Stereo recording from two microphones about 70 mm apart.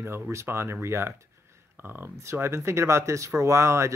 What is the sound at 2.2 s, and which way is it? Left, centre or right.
Speech, right.